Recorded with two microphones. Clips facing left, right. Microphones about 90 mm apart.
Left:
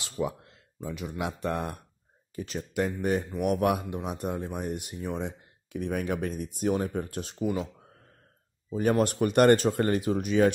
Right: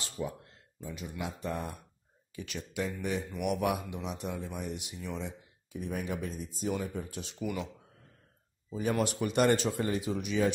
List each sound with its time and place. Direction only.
0.0 s speech: 85° left; by 1.8 s 60° left (ahead or behind)
2.3 s speech: 40° left (ahead or behind)
2.8 s speech: 50° left (ahead or behind)
3.3 s speech: 40° left (ahead or behind)
8.9 s speech: 50° left (ahead or behind)